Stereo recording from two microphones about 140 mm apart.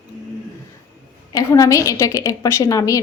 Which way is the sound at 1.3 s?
25° left (ahead or behind).